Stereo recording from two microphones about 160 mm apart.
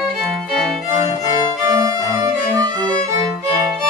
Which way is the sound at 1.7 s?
25° right (ahead or behind).